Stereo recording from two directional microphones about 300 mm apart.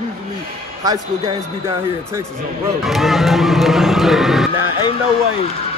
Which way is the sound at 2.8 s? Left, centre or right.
Centre.